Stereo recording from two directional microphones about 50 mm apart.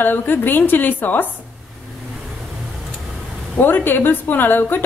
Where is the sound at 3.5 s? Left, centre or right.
Left.